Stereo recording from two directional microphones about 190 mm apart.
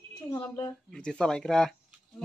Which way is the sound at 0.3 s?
20° left (ahead or behind).